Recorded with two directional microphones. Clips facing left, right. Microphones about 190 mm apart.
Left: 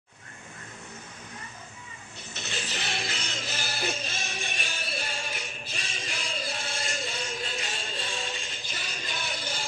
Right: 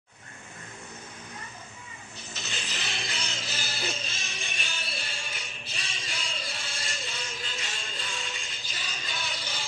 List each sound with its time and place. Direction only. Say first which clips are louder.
2.3 s music: left 3 dB; 50° left (ahead or behind)